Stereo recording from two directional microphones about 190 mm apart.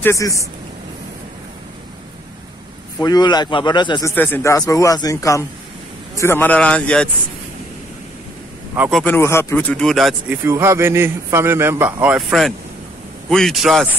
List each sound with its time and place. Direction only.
0.0 s speech: 15° left (ahead or behind)
3.0 s a man's voice: 20° left (ahead or behind)
4.1 s speech: 10° left (ahead or behind)
8.7 s a man's voice: 10° right (ahead or behind)
9.0 s speech: 10° left (ahead or behind)
10.4 s a man's voice: 15° right (ahead or behind)